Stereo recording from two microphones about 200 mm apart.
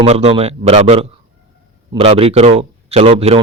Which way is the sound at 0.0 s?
30° right (ahead or behind).